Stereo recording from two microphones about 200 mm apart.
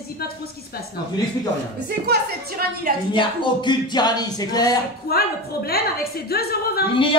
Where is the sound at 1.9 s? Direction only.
50° right (ahead or behind).